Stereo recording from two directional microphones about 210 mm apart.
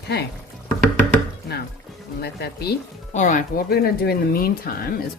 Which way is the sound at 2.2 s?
50° left (ahead or behind).